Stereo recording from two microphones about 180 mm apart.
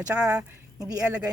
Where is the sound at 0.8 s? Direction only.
20° right (ahead or behind).